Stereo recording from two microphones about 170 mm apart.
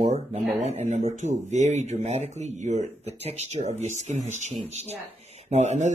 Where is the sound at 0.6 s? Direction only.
40° right (ahead or behind).